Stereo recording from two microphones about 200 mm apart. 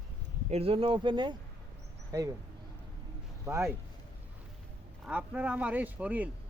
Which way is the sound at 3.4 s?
15° right (ahead or behind).